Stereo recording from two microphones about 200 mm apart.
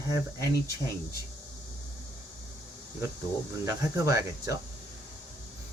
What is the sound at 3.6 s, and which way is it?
Speech, 15° right (ahead or behind).